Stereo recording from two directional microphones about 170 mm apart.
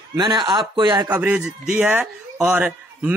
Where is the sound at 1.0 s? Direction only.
10° right (ahead or behind).